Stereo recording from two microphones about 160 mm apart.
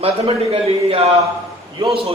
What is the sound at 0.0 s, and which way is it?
A man's voice, 40° right (ahead or behind).